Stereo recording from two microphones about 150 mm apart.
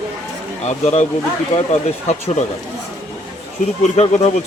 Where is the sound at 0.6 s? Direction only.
50° left (ahead or behind).